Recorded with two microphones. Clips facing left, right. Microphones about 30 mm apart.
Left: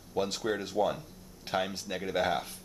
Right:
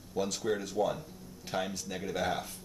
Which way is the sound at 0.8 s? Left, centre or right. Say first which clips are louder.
Left 2 dB; left.